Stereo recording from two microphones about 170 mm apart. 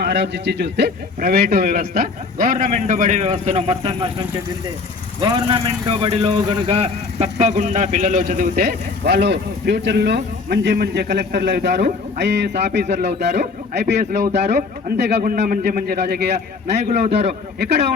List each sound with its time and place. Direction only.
0.0 s a man's voice: 90° right; by 4.1 s 35° right (ahead or behind)
5.2 s a man's voice: 25° right (ahead or behind); by 14.0 s 85° right
14.2 s a man's voice: 40° right (ahead or behind)
14.9 s a man's voice: 85° right
15.2 s a man's voice: 55° right (ahead or behind); by 16.3 s 75° right (ahead or behind)
16.7 s a man's voice: 40° right (ahead or behind)